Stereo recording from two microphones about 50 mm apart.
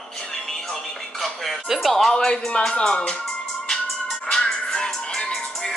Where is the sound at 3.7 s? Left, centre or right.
Centre.